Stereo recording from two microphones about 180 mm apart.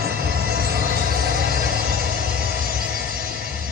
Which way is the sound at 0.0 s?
55° right (ahead or behind).